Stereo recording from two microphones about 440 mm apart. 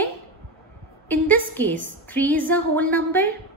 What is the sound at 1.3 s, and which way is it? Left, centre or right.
A woman's voice, centre.